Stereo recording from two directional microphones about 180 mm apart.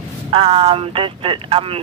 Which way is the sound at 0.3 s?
30° right (ahead or behind).